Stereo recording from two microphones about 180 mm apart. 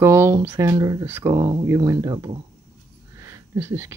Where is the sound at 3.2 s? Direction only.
15° right (ahead or behind).